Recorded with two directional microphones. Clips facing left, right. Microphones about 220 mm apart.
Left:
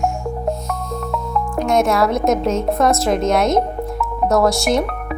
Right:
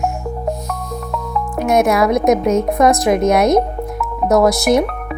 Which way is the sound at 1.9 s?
15° right (ahead or behind).